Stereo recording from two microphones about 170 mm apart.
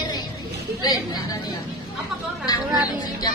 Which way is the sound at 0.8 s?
20° left (ahead or behind).